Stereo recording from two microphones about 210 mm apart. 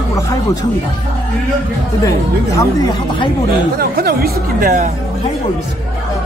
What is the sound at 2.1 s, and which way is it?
Speech, 20° left (ahead or behind).